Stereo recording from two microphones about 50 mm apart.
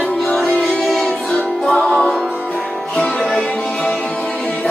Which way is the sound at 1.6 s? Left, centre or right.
Centre.